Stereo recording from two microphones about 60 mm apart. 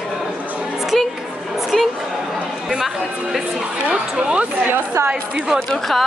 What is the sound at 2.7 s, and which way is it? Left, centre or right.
Speech, centre.